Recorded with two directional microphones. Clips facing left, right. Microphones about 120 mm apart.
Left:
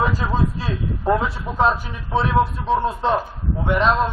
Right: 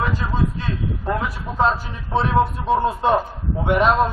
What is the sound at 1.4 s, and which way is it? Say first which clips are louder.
Speech: left 1 dB; 15° left (ahead or behind).